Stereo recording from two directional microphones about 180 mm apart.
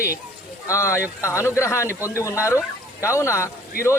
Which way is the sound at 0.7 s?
15° left (ahead or behind).